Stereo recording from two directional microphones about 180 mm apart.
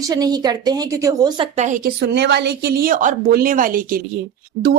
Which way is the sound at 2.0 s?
70° right (ahead or behind).